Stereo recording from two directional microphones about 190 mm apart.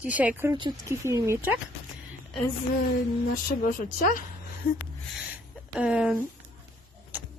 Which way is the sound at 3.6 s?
45° left (ahead or behind).